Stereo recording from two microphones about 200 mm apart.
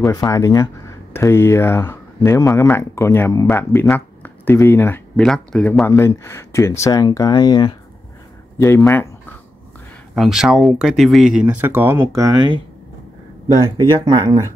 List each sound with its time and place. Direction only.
0.0 s speech: 15° left (ahead or behind)
10.1 s speech: centre (ahead or behind); by 12.6 s 20° right (ahead or behind)
13.7 s speech: 20° right (ahead or behind)